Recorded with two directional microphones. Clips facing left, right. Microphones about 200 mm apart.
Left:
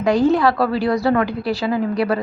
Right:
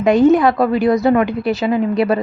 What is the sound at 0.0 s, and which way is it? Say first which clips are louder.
A woman's voice: right 4 dB; 20° right (ahead or behind).